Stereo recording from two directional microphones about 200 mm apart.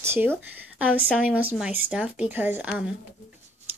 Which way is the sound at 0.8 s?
5° left (ahead or behind).